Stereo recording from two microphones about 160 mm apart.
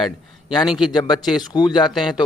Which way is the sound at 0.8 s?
25° left (ahead or behind).